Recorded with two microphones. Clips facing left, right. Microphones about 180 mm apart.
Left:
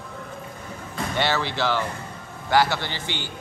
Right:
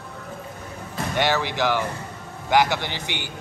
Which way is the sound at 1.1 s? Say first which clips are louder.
Right 2 dB; 15° right (ahead or behind).